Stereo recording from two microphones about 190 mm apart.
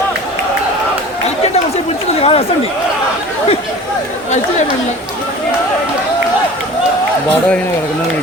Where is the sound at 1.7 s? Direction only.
30° left (ahead or behind).